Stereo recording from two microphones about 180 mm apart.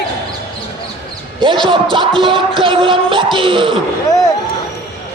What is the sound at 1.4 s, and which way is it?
Speech, 25° right (ahead or behind).